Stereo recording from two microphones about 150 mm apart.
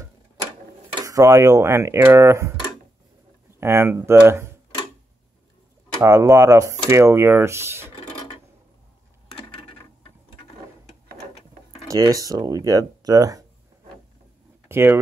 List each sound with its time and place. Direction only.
1.0 s speech: 20° right (ahead or behind)
3.5 s speech: 15° right (ahead or behind)
6.0 s speech: 20° right (ahead or behind)
11.9 s speech: 25° right (ahead or behind)
14.7 s speech: 15° right (ahead or behind)